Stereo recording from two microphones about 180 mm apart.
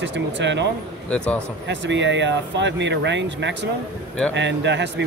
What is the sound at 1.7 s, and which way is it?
Speech, 80° right.